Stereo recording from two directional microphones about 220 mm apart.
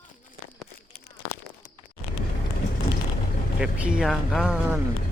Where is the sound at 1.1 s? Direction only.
45° left (ahead or behind).